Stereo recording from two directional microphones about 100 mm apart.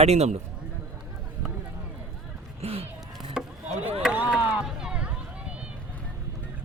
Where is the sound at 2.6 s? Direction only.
80° right.